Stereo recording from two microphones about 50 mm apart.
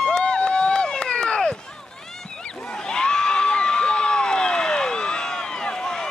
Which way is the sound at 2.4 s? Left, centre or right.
Centre.